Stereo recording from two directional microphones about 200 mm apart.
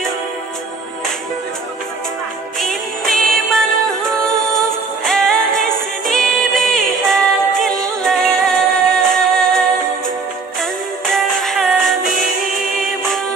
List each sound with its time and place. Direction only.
2.6 s music: centre (ahead or behind)